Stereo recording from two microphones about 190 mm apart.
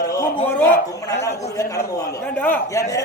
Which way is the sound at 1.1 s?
65° left (ahead or behind).